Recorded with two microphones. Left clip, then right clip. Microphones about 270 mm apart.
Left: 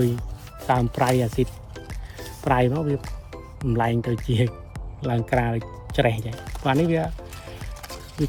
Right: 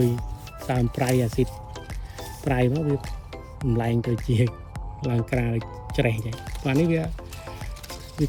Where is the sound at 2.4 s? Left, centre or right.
Centre.